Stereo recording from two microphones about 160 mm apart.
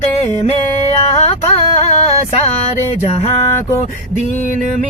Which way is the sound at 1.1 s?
40° left (ahead or behind).